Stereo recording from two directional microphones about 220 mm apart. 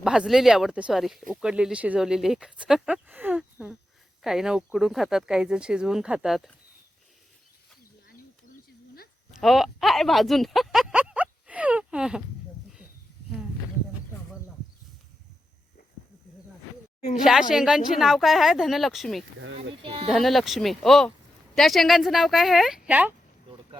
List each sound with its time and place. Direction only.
0.0 s speech: 5° right (ahead or behind)
9.4 s speech: centre (ahead or behind)
17.5 s speech: centre (ahead or behind)
19.4 s speech: 60° right (ahead or behind)
19.8 s sheep: 25° right (ahead or behind)
20.1 s speech: centre (ahead or behind)